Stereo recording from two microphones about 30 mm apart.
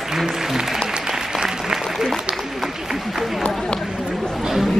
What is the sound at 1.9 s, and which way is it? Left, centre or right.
Applause, centre.